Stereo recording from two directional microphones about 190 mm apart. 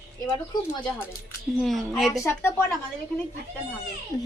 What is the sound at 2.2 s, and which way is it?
Speech, 10° left (ahead or behind).